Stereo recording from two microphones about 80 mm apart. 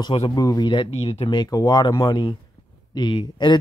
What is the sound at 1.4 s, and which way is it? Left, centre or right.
Speech, left.